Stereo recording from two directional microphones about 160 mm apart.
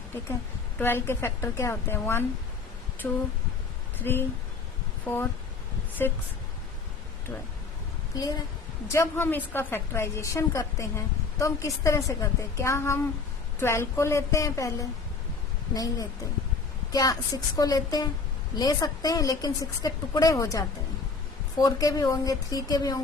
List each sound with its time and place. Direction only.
0.8 s a woman's voice: 15° left (ahead or behind)
8.9 s a woman's voice: 15° left (ahead or behind)